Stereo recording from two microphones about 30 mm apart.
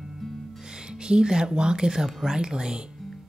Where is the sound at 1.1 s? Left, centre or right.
Right.